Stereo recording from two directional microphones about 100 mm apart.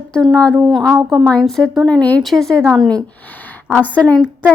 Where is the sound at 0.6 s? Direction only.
Centre (ahead or behind); by 4.0 s 15° left (ahead or behind).